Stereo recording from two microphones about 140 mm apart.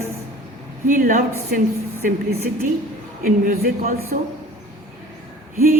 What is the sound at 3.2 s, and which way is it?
A woman's voice, 90° right.